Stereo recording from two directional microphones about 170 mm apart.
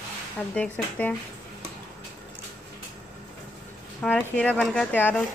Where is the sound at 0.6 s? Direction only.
10° left (ahead or behind).